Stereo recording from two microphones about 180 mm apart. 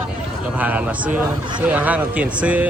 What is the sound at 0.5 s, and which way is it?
Speech, 10° right (ahead or behind).